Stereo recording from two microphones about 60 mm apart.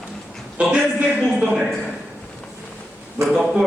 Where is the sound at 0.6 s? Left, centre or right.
Centre.